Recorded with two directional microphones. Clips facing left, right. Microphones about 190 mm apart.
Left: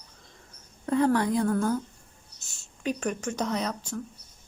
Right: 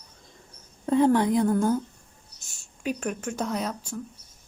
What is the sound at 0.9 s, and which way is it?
Speech, 20° right (ahead or behind).